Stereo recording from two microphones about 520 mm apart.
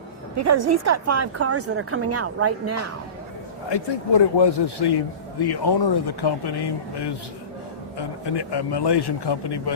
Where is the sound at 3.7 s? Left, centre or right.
Left.